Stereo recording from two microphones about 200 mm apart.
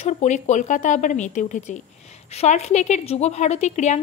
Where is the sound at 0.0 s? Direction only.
35° left (ahead or behind).